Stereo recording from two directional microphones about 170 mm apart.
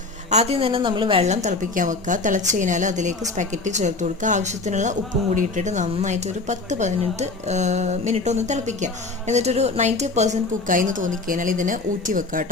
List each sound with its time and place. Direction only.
0.3 s a woman's voice: 40° right (ahead or behind)